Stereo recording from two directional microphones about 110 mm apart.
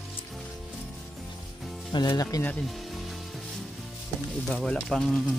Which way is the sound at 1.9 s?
40° left (ahead or behind).